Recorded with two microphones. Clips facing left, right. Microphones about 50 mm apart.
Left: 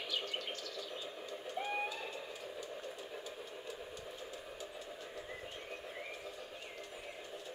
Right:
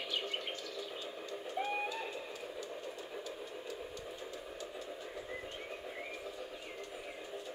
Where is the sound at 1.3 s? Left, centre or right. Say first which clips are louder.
Right 2 dB; centre.